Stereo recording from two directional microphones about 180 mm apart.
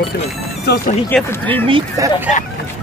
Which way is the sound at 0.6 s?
60° left (ahead or behind).